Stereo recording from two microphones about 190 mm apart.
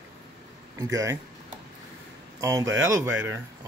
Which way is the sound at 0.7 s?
20° right (ahead or behind).